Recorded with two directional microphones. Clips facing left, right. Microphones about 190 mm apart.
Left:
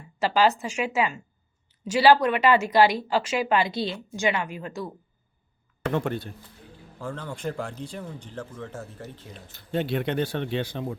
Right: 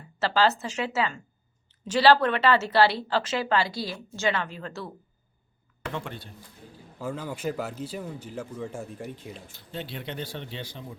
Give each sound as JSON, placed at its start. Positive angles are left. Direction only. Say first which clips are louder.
{"t": 0.2, "sound": "speech", "louder": "left 2 dB", "side_deg": 15}
{"t": 5.8, "sound": "speech", "louder": "left 8 dB", "side_deg": 55}
{"t": 7.0, "sound": "speech", "louder": "right 1 dB", "side_deg": -5}
{"t": 9.7, "sound": "speech", "louder": "left 10 dB", "side_deg": 60}